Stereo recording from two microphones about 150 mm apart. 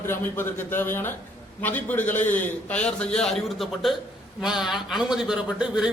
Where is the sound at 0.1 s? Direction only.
15° left (ahead or behind).